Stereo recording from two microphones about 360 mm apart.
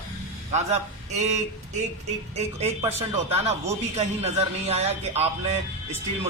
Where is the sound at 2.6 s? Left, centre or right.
Centre.